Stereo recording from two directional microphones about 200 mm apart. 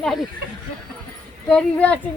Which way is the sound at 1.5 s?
5° left (ahead or behind).